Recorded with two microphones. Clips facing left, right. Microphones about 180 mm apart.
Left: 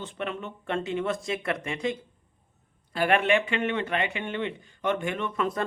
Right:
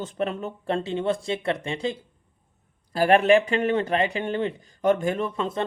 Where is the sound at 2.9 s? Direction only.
35° right (ahead or behind).